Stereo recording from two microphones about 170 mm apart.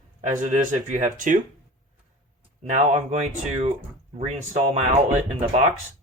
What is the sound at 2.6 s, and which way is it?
Speech, 45° right (ahead or behind).